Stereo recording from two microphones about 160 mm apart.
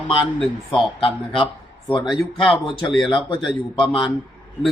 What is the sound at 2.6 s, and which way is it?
A man's voice, 30° left (ahead or behind).